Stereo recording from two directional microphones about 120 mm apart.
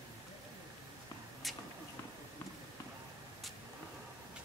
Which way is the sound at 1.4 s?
Centre (ahead or behind).